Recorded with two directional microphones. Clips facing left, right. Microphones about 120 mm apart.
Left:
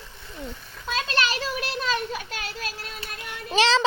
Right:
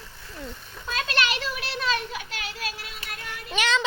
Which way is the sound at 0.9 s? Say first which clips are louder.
Left 1 dB; 35° left (ahead or behind).